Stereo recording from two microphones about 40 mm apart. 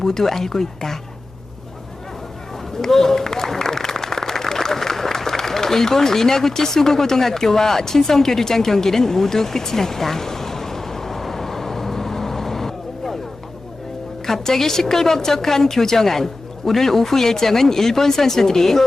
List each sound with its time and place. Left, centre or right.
0.0 s a woman's voice: centre
2.8 s applause: centre
14.3 s a woman's voice: centre